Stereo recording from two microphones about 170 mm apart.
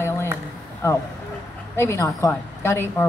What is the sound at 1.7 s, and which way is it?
Speech, 15° left (ahead or behind).